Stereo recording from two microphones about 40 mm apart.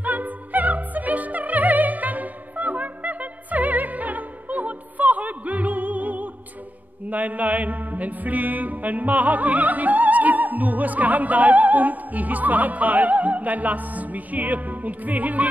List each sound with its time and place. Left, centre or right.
0.0 s music: right